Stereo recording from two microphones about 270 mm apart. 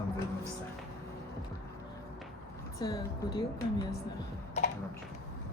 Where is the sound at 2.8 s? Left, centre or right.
Centre.